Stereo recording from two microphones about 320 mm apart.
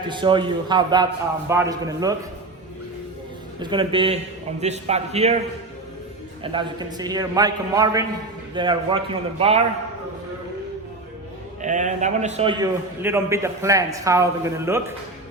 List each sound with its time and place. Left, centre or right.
0.1 s a man's voice: centre
3.6 s a man's voice: centre
6.4 s a man's voice: centre
11.6 s a man's voice: right